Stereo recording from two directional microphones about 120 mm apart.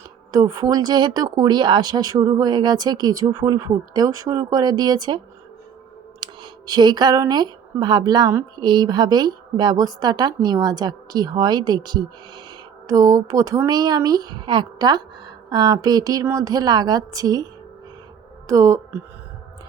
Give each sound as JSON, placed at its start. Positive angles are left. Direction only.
{"t": 0.3, "sound": "speech", "side_deg": -30}
{"t": 6.1, "sound": "clicking", "side_deg": -35}
{"t": 7.3, "sound": "speech", "side_deg": -35}